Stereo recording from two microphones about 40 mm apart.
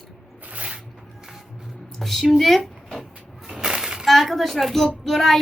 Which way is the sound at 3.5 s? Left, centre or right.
Centre.